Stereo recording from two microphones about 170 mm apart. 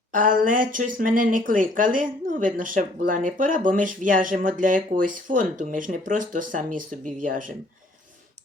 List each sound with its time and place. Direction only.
0.1 s speech: 50° right (ahead or behind)